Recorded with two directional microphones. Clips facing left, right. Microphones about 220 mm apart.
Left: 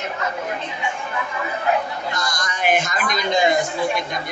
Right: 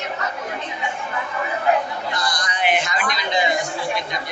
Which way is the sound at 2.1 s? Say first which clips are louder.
Right 1 dB; 45° left (ahead or behind).